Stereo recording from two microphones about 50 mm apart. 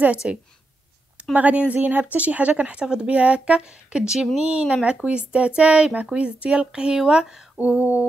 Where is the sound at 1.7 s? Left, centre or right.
Right; by 4.1 s centre.